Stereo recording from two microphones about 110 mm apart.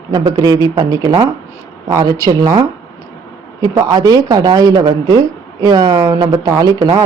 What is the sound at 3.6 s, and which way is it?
A woman's voice, 35° right (ahead or behind).